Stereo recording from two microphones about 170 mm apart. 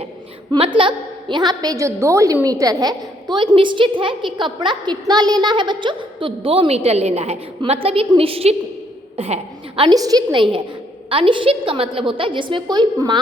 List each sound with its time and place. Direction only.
0.5 s a woman's voice: 30° right (ahead or behind)